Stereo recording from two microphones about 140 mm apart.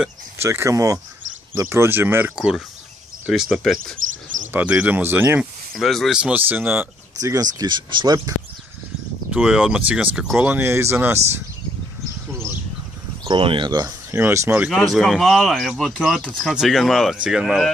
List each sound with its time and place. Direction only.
0.4 s speech: 20° right (ahead or behind)
3.3 s speech: centre (ahead or behind)
4.5 s speech: 10° right (ahead or behind)
5.8 s speech: centre (ahead or behind)
7.2 s speech: 25° right (ahead or behind)
9.3 s speech: 5° right (ahead or behind)
13.2 s speech: 35° right (ahead or behind)
14.1 s speech: 20° right (ahead or behind)
14.7 s speech: centre (ahead or behind)